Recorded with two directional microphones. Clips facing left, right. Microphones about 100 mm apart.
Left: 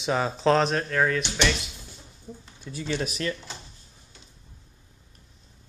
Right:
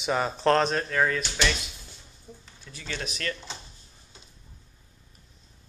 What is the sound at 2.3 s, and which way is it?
Speech, 15° left (ahead or behind).